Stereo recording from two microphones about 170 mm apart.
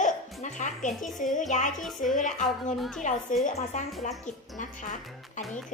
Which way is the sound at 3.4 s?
45° left (ahead or behind).